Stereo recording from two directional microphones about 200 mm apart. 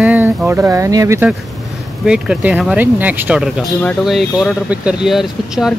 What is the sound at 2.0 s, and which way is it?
Speech, 5° right (ahead or behind).